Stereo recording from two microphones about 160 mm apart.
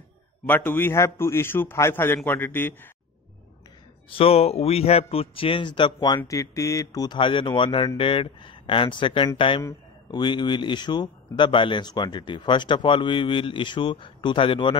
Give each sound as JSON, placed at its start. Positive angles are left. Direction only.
{"t": 0.5, "sound": "a man's voice", "side_deg": 10}
{"t": 4.1, "sound": "a man's voice", "side_deg": 35}